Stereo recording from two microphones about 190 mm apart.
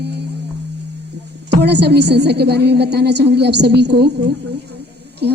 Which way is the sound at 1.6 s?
60° right (ahead or behind).